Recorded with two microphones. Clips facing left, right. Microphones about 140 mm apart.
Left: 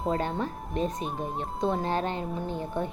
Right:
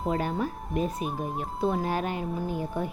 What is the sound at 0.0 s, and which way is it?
A woman's voice, 5° right (ahead or behind).